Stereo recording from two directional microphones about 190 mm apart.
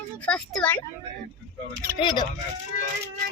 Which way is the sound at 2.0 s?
25° left (ahead or behind).